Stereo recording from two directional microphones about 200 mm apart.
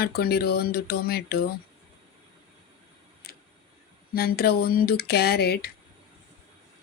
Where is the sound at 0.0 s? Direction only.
50° left (ahead or behind).